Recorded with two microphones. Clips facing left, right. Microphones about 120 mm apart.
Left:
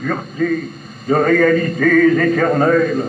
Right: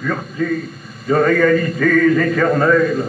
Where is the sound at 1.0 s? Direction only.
40° left (ahead or behind).